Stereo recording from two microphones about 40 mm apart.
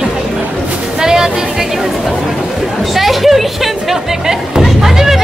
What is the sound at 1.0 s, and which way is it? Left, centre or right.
Speech, centre.